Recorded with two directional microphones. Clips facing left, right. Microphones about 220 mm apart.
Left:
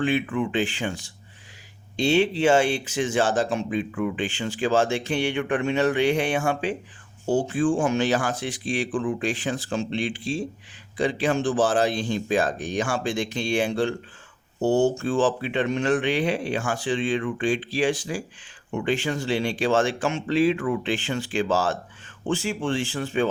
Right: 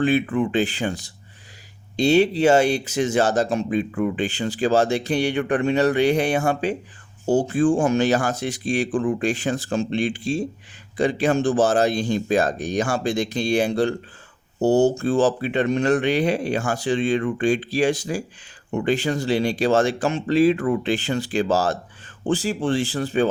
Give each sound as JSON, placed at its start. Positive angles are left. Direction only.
{"t": 0.0, "sound": "speech", "side_deg": -35}